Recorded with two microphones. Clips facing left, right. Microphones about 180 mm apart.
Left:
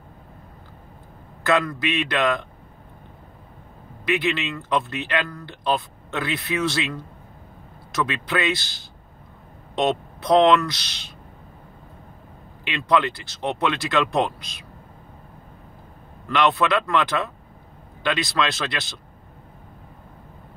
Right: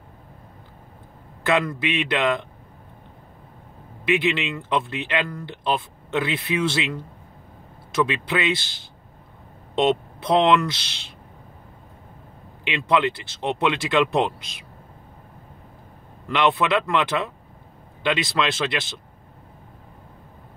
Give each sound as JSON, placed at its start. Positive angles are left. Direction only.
{"t": 1.4, "sound": "speech", "side_deg": -20}
{"t": 4.0, "sound": "speech", "side_deg": -20}
{"t": 9.8, "sound": "speech", "side_deg": -25}
{"t": 12.6, "sound": "speech", "side_deg": -20}
{"t": 16.3, "sound": "speech", "side_deg": -20}